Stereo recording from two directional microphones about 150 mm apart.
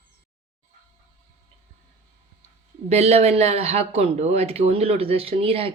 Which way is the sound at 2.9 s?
45° right (ahead or behind).